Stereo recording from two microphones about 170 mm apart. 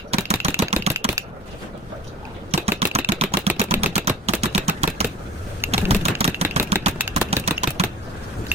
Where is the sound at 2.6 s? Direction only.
35° right (ahead or behind).